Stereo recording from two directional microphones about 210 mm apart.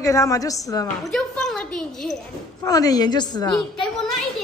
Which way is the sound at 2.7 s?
15° left (ahead or behind).